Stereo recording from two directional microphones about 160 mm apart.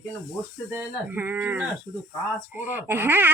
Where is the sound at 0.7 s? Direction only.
15° right (ahead or behind).